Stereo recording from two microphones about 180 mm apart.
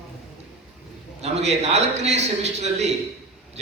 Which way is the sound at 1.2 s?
35° right (ahead or behind).